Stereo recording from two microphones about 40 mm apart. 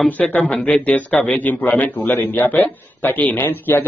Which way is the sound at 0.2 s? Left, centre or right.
Left.